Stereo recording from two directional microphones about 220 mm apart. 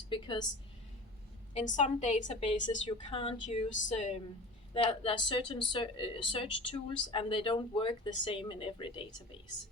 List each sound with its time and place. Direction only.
0.1 s speech: 20° left (ahead or behind)
1.5 s a woman's voice: 35° left (ahead or behind)